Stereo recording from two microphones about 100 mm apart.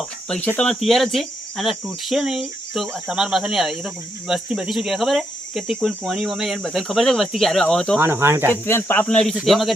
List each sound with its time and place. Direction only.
0.0 s speech: 10° left (ahead or behind)
7.9 s speech: 25° right (ahead or behind)
8.4 s speech: 25° left (ahead or behind)
9.0 s speech: 10° left (ahead or behind)
9.3 s speech: 5° right (ahead or behind)